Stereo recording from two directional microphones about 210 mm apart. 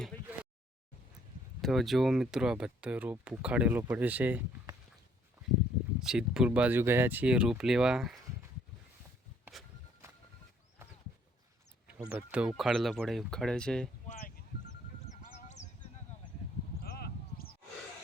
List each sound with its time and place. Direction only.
1.6 s speech: centre (ahead or behind)
6.0 s speech: 5° right (ahead or behind)
9.4 s a sound: centre (ahead or behind)
11.9 s speech: 5° right (ahead or behind)
14.1 s a sound: 40° left (ahead or behind)
15.1 s sheep: 35° left (ahead or behind)
16.8 s sheep: 45° left (ahead or behind)